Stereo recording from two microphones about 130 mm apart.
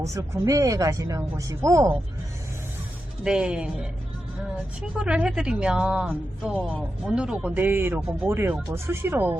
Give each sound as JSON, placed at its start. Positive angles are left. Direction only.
{"t": 0.0, "sound": "speech", "side_deg": -25}
{"t": 3.2, "sound": "speech", "side_deg": -5}
{"t": 4.9, "sound": "speech", "side_deg": -10}